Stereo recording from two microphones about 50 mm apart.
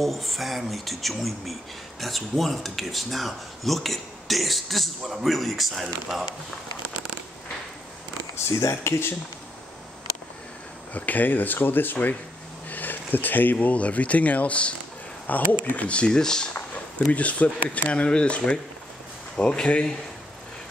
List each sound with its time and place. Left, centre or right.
0.0 s speech: centre
8.5 s speech: left
10.9 s speech: left; by 16.4 s centre
17.1 s speech: left